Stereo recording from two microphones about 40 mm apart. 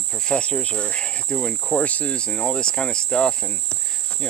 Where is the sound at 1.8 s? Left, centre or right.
Left.